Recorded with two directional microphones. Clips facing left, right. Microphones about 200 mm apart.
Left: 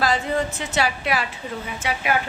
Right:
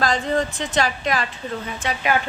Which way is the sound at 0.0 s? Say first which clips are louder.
Right 1 dB; 5° left (ahead or behind).